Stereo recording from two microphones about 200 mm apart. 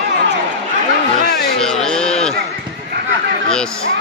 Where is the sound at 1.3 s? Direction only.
Centre (ahead or behind).